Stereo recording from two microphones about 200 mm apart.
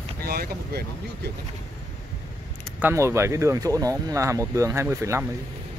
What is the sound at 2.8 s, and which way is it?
Speech, 10° right (ahead or behind).